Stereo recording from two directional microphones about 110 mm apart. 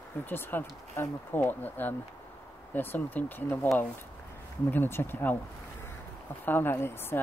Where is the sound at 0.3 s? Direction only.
20° left (ahead or behind).